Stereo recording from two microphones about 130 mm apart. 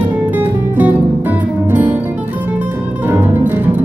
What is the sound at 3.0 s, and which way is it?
Music, 15° right (ahead or behind).